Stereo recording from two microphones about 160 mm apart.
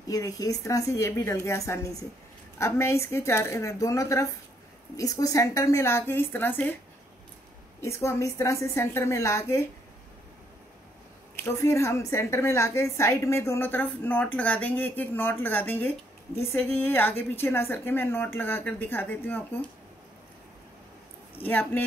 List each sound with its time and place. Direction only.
0.1 s a woman's voice: 20° left (ahead or behind)
7.8 s a woman's voice: 15° left (ahead or behind)
11.3 s a woman's voice: 15° left (ahead or behind)
21.4 s a woman's voice: 10° left (ahead or behind)